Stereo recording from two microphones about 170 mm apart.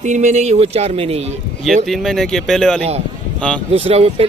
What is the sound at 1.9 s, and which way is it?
A man's voice, centre (ahead or behind).